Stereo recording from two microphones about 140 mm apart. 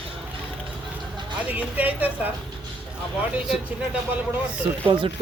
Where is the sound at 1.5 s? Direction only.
10° right (ahead or behind).